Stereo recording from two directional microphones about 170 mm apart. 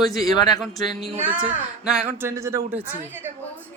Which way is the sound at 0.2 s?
20° left (ahead or behind).